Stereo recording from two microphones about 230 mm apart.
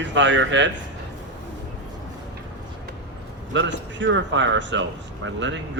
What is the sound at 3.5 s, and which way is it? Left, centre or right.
Speech, right.